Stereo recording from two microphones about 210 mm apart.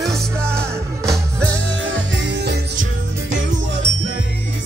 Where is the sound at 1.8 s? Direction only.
60° right (ahead or behind).